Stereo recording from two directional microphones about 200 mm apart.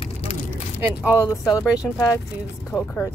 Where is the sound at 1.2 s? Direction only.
15° left (ahead or behind).